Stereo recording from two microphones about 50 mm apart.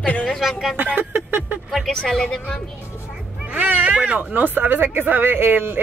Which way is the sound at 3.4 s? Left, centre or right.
Right.